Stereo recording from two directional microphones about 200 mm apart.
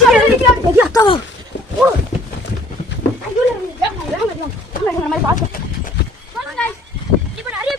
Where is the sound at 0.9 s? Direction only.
25° left (ahead or behind).